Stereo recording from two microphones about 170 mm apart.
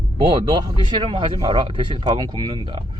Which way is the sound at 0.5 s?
30° right (ahead or behind).